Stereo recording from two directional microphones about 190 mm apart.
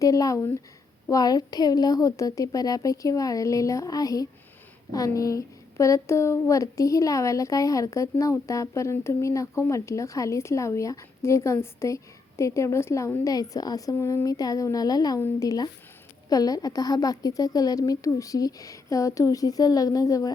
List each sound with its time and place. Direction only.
0.0 s a woman's voice: 15° left (ahead or behind)